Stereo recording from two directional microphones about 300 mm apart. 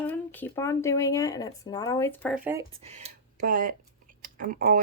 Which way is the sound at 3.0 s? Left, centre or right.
Right.